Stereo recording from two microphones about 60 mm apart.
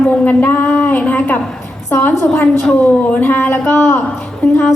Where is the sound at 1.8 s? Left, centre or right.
Left.